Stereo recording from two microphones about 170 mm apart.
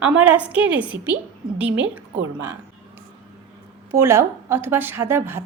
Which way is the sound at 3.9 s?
15° right (ahead or behind).